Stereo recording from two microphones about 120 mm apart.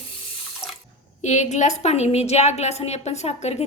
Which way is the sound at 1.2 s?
75° left (ahead or behind).